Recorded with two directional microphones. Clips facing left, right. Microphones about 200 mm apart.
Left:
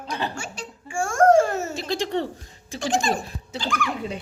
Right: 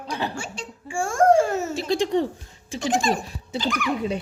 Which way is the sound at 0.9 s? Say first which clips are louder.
Even; 30° right (ahead or behind).